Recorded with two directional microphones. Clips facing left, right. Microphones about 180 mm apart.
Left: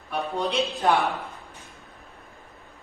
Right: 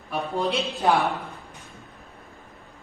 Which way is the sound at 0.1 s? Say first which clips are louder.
Right 1 dB; centre (ahead or behind).